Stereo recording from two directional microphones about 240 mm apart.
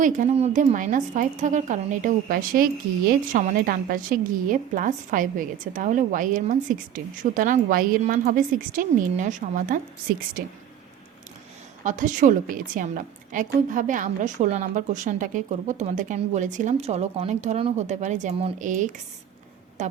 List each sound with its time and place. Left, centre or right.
0.0 s a woman's voice: right
11.8 s a woman's voice: right